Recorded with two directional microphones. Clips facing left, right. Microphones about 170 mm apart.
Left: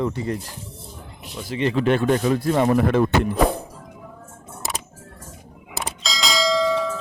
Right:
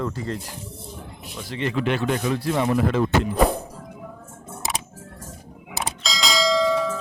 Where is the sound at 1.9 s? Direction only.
45° left (ahead or behind).